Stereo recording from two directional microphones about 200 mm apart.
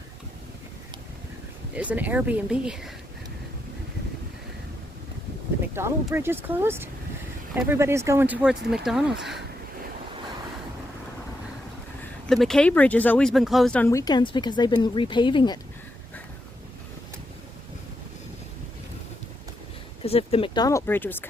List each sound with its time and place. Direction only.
1.7 s speech: 5° right (ahead or behind)
5.8 s speech: 10° right (ahead or behind)
12.3 s speech: centre (ahead or behind); by 15.5 s 25° left (ahead or behind)
20.0 s speech: 30° left (ahead or behind); by 21.2 s 10° left (ahead or behind)